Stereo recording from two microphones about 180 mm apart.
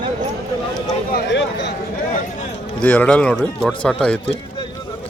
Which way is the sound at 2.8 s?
10° left (ahead or behind).